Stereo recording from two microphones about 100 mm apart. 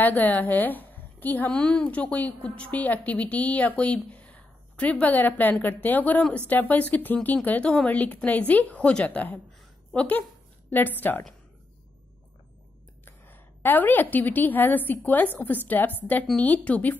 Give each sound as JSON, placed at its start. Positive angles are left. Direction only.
{"t": 0.0, "sound": "a woman's voice", "side_deg": 15}
{"t": 13.0, "sound": "a woman's voice", "side_deg": 20}